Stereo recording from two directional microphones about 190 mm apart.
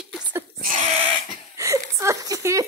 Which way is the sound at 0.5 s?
45° right (ahead or behind).